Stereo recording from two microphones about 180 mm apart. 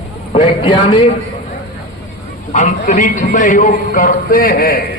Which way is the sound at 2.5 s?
45° left (ahead or behind).